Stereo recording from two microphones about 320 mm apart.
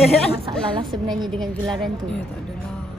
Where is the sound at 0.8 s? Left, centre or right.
Centre.